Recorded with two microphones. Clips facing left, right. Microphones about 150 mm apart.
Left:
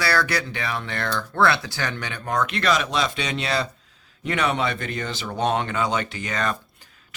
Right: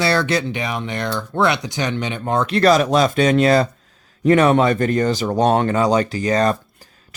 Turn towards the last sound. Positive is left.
turn(degrees=-40)  # may be behind; listen again after turning